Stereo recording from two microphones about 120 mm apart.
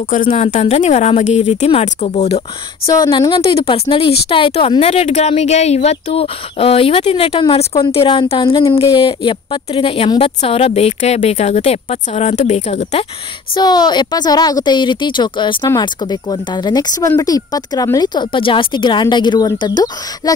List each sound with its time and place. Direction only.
0.3 s a woman's voice: 65° left (ahead or behind)
2.9 s speech: 35° left (ahead or behind)
3.3 s speech: 50° left (ahead or behind)
10.4 s a woman's voice: 60° left (ahead or behind)
13.6 s speech: 35° left (ahead or behind)